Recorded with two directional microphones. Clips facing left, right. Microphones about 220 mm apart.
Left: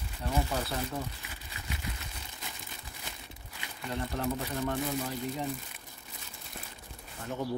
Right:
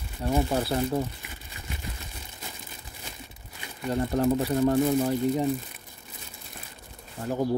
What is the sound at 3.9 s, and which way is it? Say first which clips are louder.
Speech: right 9 dB; 40° right (ahead or behind).